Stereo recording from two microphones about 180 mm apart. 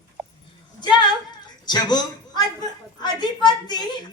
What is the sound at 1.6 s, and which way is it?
A man's voice, 25° left (ahead or behind).